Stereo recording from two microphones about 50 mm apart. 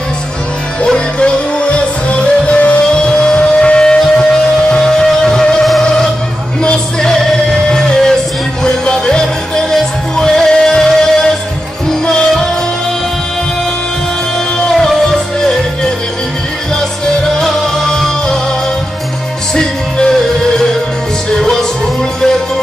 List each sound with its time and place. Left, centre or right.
0.8 s music: centre
14.7 s music: centre
17.0 s music: centre
19.5 s music: centre